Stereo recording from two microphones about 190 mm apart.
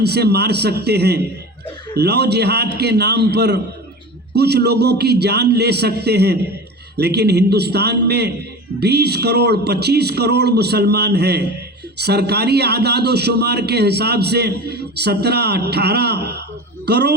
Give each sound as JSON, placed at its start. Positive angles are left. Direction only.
{"t": 0.0, "sound": "a man's voice", "side_deg": -60}